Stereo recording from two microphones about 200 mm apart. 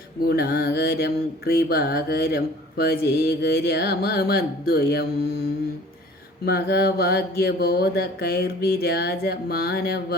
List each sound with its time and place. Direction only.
0.2 s mantra: 50° left (ahead or behind)
6.4 s mantra: 50° left (ahead or behind)